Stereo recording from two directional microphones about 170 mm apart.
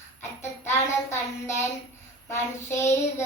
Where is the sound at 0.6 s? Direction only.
15° left (ahead or behind).